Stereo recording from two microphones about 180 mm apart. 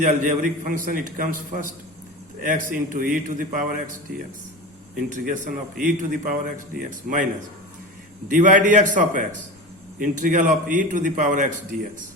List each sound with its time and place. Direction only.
0.0 s a man's voice: 45° right (ahead or behind)
5.0 s a man's voice: 45° right (ahead or behind)
8.3 s a man's voice: 45° right (ahead or behind)